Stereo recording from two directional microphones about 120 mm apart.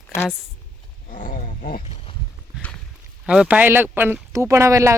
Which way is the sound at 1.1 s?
90° left.